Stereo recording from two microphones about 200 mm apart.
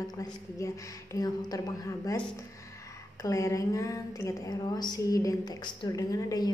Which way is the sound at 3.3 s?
15° left (ahead or behind).